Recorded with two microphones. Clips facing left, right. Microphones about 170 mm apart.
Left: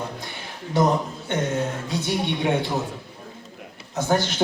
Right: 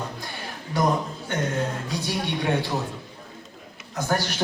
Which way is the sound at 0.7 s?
25° left (ahead or behind).